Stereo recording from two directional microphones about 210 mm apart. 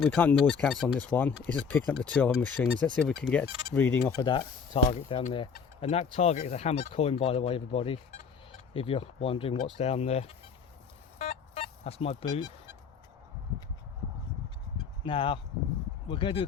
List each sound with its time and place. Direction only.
0.0 s speech: 5° left (ahead or behind)
4.2 s speech: 20° left (ahead or behind)
11.2 s a sound: 30° left (ahead or behind)
15.0 s speech: 25° left (ahead or behind)